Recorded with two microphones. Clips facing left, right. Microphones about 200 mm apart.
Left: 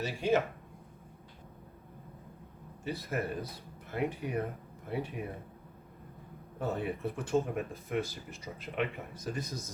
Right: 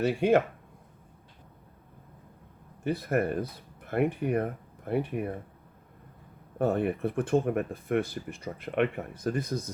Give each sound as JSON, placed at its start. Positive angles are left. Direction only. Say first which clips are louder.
{"t": 0.0, "sound": "speech", "louder": "right 6 dB", "side_deg": -60}
{"t": 2.8, "sound": "speech", "louder": "right 8 dB", "side_deg": -55}
{"t": 6.6, "sound": "speech", "louder": "right 7 dB", "side_deg": -55}